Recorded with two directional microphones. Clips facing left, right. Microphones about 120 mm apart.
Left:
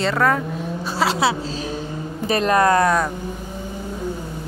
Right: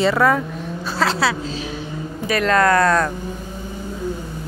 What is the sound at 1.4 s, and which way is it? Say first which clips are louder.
Vehicle: left 1 dB; 40° left (ahead or behind).